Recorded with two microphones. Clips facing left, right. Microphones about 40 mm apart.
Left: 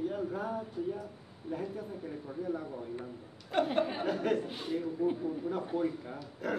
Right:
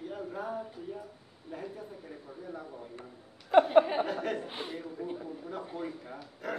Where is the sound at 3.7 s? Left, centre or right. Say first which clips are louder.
Right 8 dB; right.